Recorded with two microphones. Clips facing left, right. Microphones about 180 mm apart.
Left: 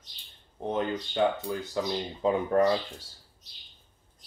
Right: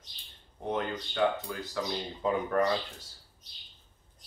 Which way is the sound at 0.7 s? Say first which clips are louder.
Left 3 dB; 25° left (ahead or behind).